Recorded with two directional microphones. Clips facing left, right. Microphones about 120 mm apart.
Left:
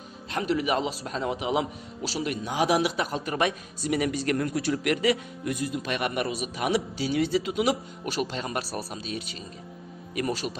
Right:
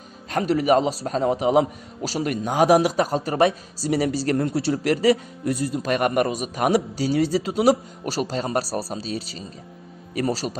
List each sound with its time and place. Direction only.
0.3 s a man's voice: 40° right (ahead or behind)